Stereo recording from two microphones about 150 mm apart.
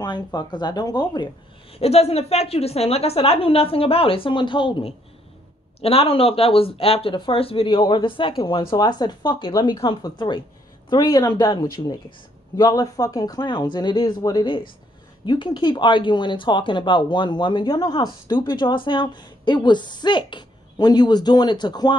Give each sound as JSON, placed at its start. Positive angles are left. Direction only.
{"t": 0.0, "sound": "speech", "side_deg": 30}